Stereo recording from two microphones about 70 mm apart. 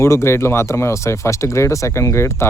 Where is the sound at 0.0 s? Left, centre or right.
Left.